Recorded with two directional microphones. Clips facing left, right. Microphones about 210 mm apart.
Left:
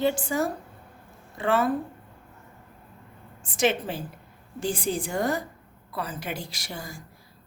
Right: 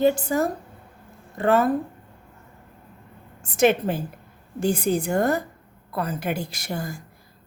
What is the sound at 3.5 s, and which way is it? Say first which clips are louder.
Speech: right 6 dB; 55° right (ahead or behind).